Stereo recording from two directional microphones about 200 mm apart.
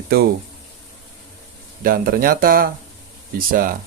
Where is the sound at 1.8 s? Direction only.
45° right (ahead or behind).